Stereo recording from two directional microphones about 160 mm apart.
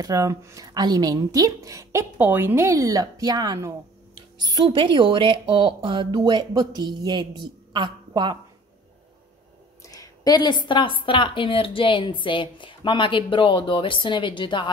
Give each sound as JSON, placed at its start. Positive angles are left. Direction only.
{"t": 0.0, "sound": "a woman's voice", "side_deg": -20}
{"t": 9.8, "sound": "a woman's voice", "side_deg": 20}